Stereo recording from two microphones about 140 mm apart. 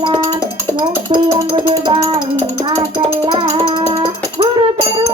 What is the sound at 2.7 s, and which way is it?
Child singing, 30° right (ahead or behind).